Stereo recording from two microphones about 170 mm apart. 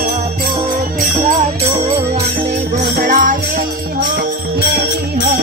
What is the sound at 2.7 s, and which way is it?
Music, 50° right (ahead or behind).